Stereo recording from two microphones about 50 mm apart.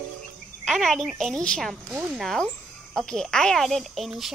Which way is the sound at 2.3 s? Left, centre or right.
Centre.